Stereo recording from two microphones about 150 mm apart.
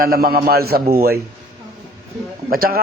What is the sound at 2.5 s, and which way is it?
Speech, 80° right.